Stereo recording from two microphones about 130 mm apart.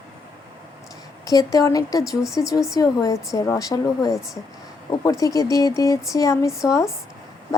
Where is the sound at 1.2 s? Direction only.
25° left (ahead or behind).